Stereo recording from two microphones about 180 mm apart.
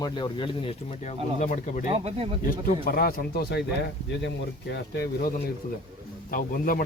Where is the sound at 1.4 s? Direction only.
45° left (ahead or behind).